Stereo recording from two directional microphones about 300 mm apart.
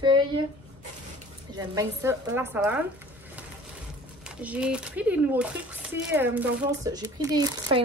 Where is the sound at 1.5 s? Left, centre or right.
Centre.